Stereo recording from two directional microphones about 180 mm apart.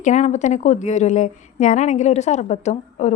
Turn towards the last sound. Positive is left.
turn(degrees=40)  # may be behind; listen again after turning